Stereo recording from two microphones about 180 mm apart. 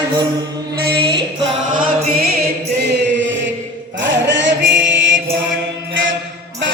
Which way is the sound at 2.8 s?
75° right (ahead or behind).